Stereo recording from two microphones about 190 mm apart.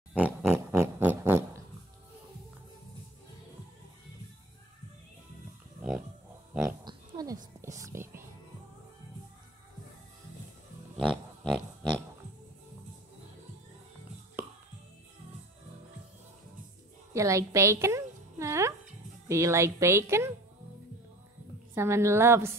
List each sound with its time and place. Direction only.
0.1 s pig: 5° right (ahead or behind)
5.8 s pig: 5° right (ahead or behind)
6.8 s oink: 20° right (ahead or behind)
7.6 s whispering: 15° right (ahead or behind)
11.0 s pig: centre (ahead or behind)
17.1 s a sound: 15° right (ahead or behind)
19.2 s a woman's voice: 15° right (ahead or behind)
21.7 s a woman's voice: 15° right (ahead or behind)